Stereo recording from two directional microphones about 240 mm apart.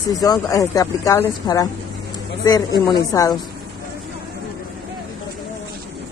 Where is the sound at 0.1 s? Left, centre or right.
Centre.